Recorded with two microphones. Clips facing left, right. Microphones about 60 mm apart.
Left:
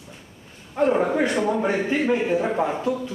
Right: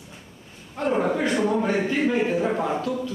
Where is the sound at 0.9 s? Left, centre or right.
Centre.